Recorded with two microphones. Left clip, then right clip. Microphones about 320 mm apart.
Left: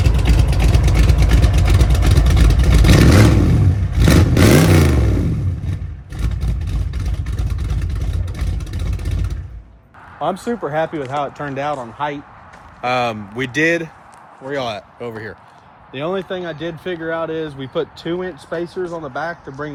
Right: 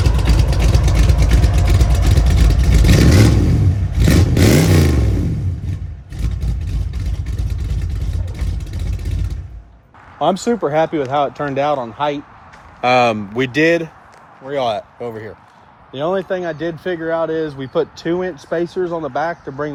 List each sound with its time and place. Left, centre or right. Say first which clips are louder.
0.3 s vehicle: left 1 dB; centre
10.2 s speech: right 5 dB; right